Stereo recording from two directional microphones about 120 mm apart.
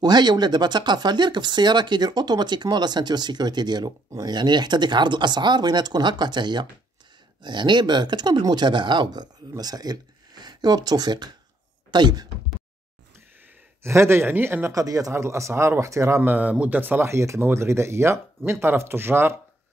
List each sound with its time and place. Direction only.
0.0 s speech: 35° right (ahead or behind)
13.8 s speech: 20° right (ahead or behind)
14.7 s speech: 30° right (ahead or behind)
16.2 s speech: 15° right (ahead or behind)